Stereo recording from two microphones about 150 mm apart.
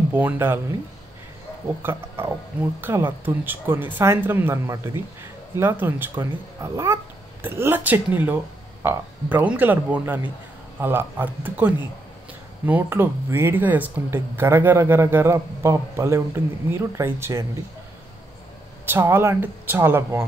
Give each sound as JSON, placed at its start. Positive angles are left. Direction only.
{"t": 0.1, "sound": "speech", "side_deg": -15}
{"t": 1.8, "sound": "speech", "side_deg": -15}
{"t": 18.9, "sound": "speech", "side_deg": -15}